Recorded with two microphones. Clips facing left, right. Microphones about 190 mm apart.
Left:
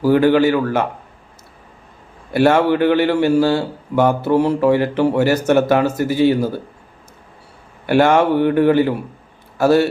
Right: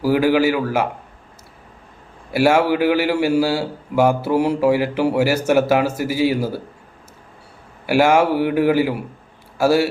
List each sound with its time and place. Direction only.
0.0 s a man's voice: 5° right (ahead or behind)
2.3 s a man's voice: 10° right (ahead or behind)
7.9 s a man's voice: 10° right (ahead or behind)